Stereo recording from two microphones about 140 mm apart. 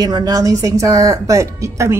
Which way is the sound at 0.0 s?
30° right (ahead or behind).